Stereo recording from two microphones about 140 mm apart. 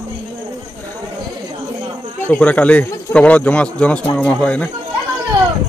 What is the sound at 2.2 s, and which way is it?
Speech, 10° left (ahead or behind).